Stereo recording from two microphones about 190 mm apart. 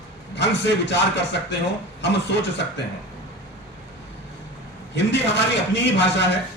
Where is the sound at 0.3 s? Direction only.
65° left (ahead or behind).